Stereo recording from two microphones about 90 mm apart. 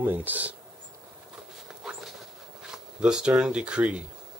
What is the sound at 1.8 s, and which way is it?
Dog, 5° right (ahead or behind).